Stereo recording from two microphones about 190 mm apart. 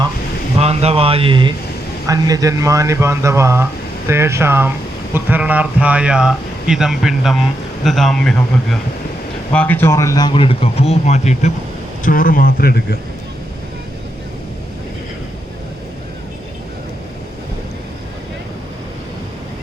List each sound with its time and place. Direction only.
0.6 s speech: 35° right (ahead or behind); by 11.5 s 35° left (ahead or behind)
12.0 s speech: 45° left (ahead or behind)